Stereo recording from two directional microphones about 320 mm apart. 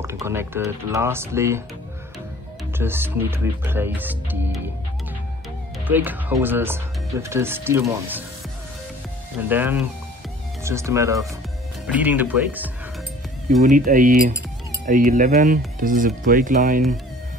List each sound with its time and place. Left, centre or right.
0.0 s speech: centre
2.8 s speech: centre
5.9 s speech: centre
9.5 s speech: centre
13.7 s speech: right